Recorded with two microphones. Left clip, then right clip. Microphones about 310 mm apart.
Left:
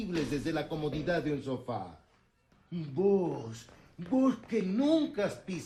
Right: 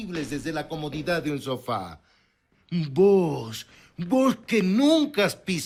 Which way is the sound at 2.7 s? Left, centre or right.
Right.